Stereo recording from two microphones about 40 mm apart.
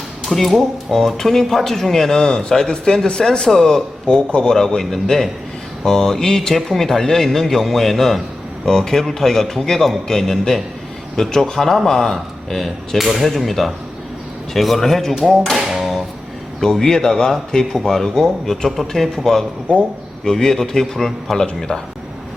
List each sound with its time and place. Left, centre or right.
0.3 s speech: centre
4.0 s speech: left; by 15.4 s centre
15.5 s tap: centre
16.8 s speech: centre
19.7 s speech: left
20.2 s speech: centre
21.7 s speech: left